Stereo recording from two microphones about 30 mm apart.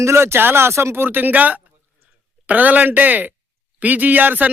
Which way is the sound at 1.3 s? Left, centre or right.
Right.